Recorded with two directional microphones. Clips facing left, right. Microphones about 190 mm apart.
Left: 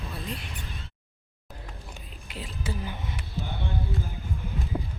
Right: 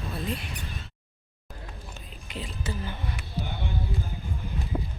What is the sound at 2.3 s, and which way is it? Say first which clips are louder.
Speech: right 1 dB; 5° left (ahead or behind).